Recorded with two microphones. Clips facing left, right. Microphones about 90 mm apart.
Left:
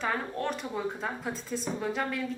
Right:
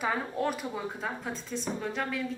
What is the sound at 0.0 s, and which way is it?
Speech, 5° right (ahead or behind).